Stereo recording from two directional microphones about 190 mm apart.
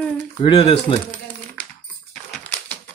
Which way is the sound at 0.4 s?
30° left (ahead or behind).